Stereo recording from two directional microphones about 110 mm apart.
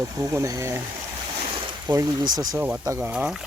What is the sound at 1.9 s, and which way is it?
Speech, 30° right (ahead or behind).